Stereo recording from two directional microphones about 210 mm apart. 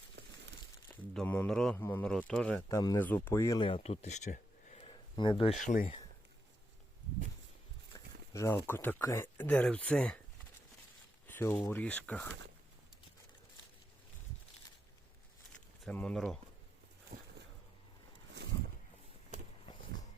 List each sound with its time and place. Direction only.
0.2 s crumpling: 55° right (ahead or behind)
1.1 s speech: 5° left (ahead or behind)
2.6 s speech: 15° left (ahead or behind)
5.5 s speech: 40° left (ahead or behind)
7.9 s speech: 15° left (ahead or behind)
11.3 s speech: 10° left (ahead or behind)
15.8 s speech: 5° left (ahead or behind)